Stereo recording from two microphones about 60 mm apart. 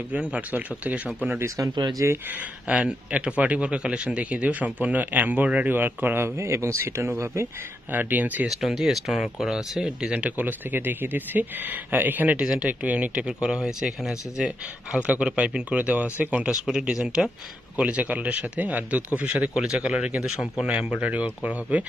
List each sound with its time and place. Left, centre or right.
0.1 s speech: right
1.4 s speech: right
2.7 s speech: centre
6.1 s speech: right
7.9 s speech: right
8.5 s speech: centre
10.3 s speech: right
12.4 s speech: centre
12.6 s speech: right
16.4 s speech: centre; by 19.0 s right
19.5 s speech: centre